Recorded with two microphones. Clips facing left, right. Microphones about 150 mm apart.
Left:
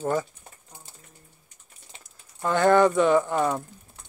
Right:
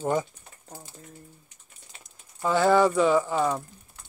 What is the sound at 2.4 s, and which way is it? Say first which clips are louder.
Speech: left 1 dB; 5° right (ahead or behind).